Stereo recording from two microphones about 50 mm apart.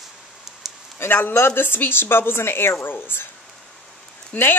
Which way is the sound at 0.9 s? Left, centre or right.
Left.